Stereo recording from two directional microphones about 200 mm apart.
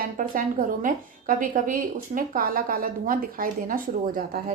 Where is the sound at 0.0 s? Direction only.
40° right (ahead or behind).